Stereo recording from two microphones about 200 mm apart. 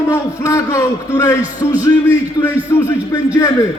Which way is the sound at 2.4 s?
20° left (ahead or behind).